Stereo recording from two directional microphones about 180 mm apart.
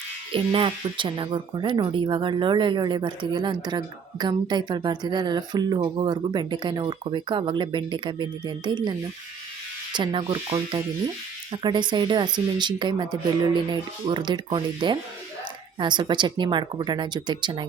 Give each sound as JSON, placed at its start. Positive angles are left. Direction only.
{"t": 0.3, "sound": "speech", "side_deg": -30}